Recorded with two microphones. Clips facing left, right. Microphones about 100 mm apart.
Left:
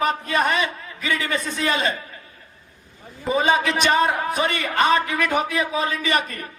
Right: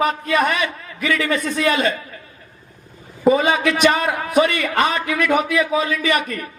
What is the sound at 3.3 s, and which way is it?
A man's voice, 30° left (ahead or behind).